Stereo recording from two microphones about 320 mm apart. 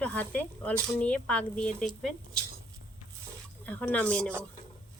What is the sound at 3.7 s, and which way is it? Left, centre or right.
Speech, centre.